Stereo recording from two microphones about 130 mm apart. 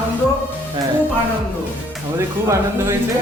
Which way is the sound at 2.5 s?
20° right (ahead or behind).